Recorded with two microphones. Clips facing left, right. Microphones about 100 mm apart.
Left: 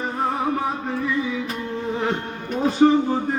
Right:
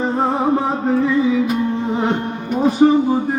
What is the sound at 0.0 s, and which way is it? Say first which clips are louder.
Music: right 6 dB; 25° right (ahead or behind).